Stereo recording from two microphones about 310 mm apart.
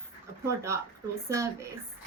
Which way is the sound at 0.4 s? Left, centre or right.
Centre.